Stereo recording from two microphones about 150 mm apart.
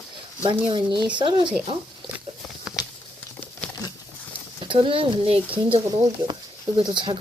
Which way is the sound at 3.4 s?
10° left (ahead or behind).